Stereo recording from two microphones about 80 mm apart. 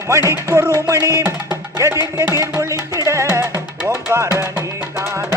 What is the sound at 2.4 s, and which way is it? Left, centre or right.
Music, right.